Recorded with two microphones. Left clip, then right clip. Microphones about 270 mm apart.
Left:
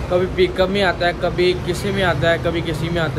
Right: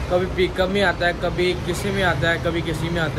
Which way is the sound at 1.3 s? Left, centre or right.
Left.